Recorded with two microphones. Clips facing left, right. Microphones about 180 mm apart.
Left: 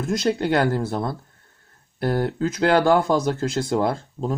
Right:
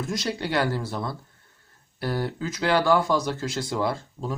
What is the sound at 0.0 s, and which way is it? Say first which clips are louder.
Speech: left 7 dB; 50° left (ahead or behind).